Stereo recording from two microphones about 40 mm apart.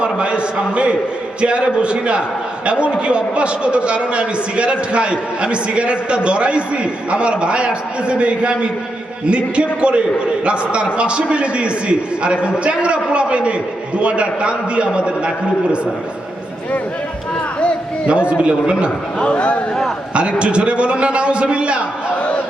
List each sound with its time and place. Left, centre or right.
0.0 s a man's voice: right
18.1 s a man's voice: right
19.2 s speech: left
20.4 s a man's voice: right